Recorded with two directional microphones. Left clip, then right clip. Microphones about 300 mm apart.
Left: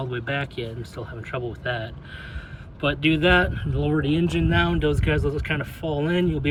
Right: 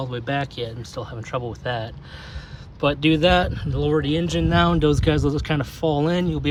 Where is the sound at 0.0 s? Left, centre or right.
Centre.